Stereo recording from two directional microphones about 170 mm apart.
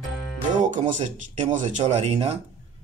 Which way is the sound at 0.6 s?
45° right (ahead or behind).